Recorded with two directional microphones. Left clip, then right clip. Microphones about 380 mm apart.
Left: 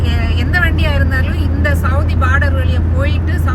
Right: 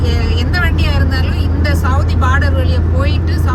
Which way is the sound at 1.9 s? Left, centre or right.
Centre.